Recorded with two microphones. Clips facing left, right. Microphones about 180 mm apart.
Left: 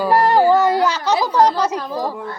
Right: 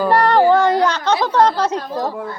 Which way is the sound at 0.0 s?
5° left (ahead or behind).